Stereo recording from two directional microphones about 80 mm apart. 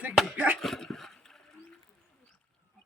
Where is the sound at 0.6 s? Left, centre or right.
Centre.